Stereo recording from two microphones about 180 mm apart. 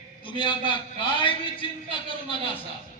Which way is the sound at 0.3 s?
25° left (ahead or behind).